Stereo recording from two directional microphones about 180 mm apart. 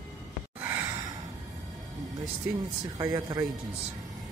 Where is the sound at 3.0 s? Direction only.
20° right (ahead or behind).